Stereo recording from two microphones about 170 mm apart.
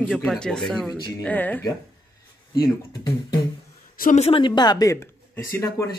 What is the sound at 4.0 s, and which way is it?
Speech, 45° left (ahead or behind).